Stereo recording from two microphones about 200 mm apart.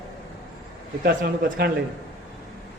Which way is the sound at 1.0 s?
55° right (ahead or behind).